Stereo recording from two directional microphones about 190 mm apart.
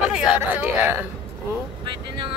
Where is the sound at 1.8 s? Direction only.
25° right (ahead or behind).